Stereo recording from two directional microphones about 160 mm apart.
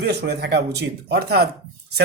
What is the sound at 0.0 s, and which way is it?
A man's voice, 90° right.